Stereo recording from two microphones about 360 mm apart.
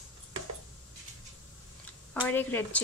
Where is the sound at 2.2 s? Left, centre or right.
Centre.